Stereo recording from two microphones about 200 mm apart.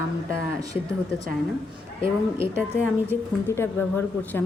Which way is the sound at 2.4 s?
10° right (ahead or behind).